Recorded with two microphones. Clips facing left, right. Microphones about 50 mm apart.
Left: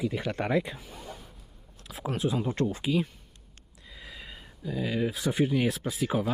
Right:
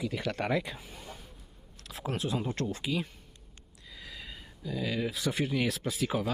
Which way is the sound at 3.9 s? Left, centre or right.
Left.